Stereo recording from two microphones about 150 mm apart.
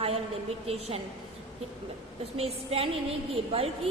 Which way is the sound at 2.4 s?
40° right (ahead or behind).